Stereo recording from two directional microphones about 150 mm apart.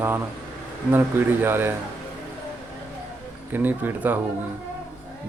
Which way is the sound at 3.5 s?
10° right (ahead or behind).